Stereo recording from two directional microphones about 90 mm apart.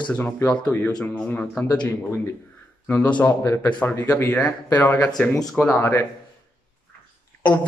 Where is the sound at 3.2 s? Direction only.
35° left (ahead or behind).